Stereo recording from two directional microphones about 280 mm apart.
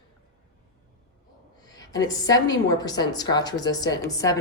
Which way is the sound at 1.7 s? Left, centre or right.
Centre.